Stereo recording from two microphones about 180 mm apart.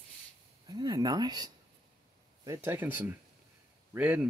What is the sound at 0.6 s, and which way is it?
Speech, 20° right (ahead or behind).